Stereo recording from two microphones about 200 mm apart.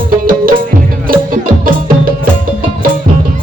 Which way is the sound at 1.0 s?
45° right (ahead or behind).